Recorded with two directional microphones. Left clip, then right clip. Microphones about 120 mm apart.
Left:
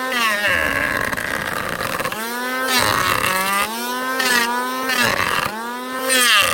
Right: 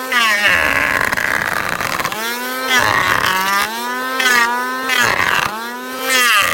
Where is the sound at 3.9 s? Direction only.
10° left (ahead or behind).